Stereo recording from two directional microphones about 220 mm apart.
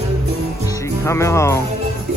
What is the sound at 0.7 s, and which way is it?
Speech, 15° left (ahead or behind).